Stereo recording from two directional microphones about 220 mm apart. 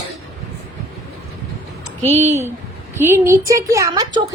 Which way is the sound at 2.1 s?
30° right (ahead or behind).